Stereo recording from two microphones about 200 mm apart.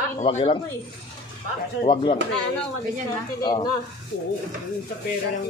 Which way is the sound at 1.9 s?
25° left (ahead or behind).